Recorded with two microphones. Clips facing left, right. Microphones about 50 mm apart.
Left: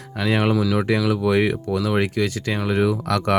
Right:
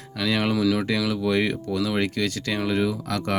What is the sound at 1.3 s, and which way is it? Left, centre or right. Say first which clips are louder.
Speech: left 4 dB; left.